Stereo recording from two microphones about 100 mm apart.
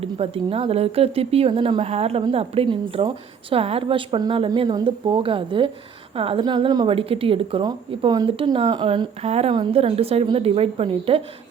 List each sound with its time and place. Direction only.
0.0 s speech: 80° right
2.3 s a woman's voice: 80° right
6.4 s speech: 45° right (ahead or behind)
6.8 s speech: 70° right (ahead or behind)
7.6 s speech: 45° right (ahead or behind)
8.7 s a woman's voice: 55° right (ahead or behind)